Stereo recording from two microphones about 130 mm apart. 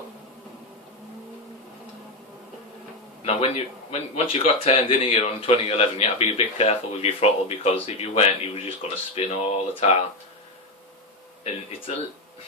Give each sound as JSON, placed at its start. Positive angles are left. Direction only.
{"t": 3.2, "sound": "speech", "side_deg": 50}
{"t": 11.4, "sound": "speech", "side_deg": 45}